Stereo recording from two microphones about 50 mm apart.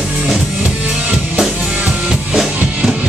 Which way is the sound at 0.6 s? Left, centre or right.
Right.